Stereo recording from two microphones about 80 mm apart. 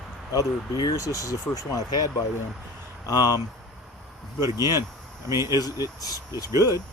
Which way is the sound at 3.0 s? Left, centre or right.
Left.